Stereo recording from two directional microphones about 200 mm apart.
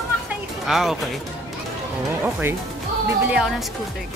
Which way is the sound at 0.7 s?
Centre (ahead or behind).